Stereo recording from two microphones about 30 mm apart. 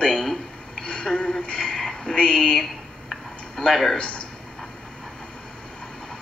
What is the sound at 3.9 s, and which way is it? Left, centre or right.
Speech, left.